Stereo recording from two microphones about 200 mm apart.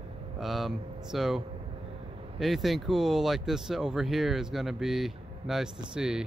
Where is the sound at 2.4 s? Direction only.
Centre (ahead or behind).